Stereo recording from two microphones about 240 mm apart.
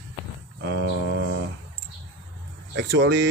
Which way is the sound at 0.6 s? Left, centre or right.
Right.